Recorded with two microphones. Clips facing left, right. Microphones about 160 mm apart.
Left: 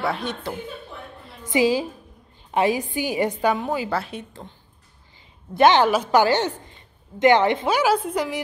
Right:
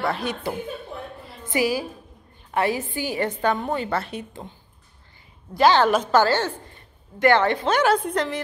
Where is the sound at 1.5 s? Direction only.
20° left (ahead or behind); by 4.2 s centre (ahead or behind).